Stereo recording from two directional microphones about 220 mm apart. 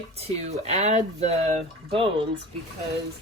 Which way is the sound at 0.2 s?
30° right (ahead or behind).